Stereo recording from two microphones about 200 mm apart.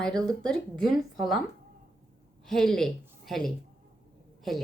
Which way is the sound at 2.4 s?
Centre (ahead or behind).